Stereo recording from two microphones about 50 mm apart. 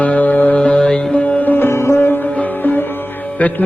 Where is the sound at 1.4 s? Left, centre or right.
Left.